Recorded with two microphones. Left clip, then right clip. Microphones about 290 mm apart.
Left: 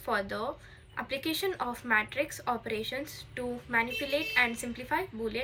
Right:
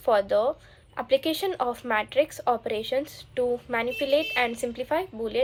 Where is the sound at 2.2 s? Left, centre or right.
Centre.